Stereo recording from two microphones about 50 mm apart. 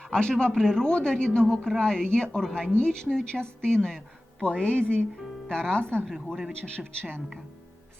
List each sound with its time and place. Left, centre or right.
0.0 s a man's voice: centre